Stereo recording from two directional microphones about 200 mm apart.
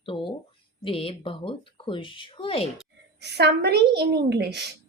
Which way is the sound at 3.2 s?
55° right (ahead or behind).